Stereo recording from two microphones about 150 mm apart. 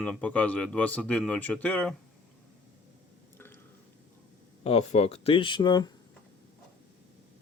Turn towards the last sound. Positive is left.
turn(degrees=30)  # may be behind; listen again after turning